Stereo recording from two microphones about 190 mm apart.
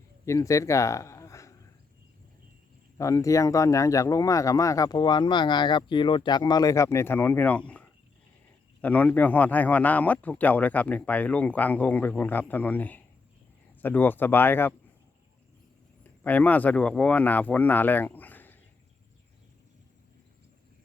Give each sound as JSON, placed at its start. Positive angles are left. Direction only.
{"t": 0.3, "sound": "speech", "side_deg": 15}
{"t": 3.0, "sound": "speech", "side_deg": 15}
{"t": 8.8, "sound": "speech", "side_deg": 10}
{"t": 16.2, "sound": "speech", "side_deg": 10}